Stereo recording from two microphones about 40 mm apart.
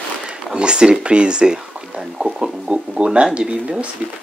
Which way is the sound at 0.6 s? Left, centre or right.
Right.